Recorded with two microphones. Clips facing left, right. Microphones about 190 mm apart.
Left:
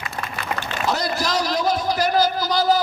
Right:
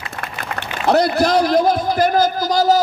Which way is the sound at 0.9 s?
60° right (ahead or behind).